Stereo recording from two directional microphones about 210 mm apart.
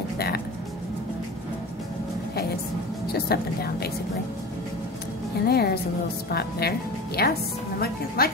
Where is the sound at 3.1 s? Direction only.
50° left (ahead or behind).